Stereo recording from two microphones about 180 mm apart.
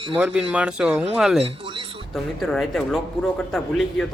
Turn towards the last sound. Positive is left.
turn(degrees=0)  # may be behind; listen again after turning